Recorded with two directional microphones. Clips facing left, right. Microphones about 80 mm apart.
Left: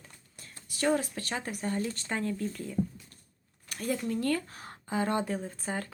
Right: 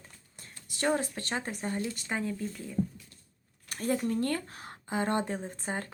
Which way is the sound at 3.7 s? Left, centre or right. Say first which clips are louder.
Right 2 dB; right.